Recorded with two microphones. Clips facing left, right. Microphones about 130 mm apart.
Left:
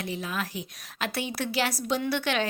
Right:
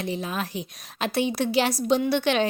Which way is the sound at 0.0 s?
25° right (ahead or behind).